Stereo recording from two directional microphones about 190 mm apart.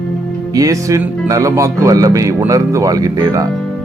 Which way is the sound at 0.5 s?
15° right (ahead or behind).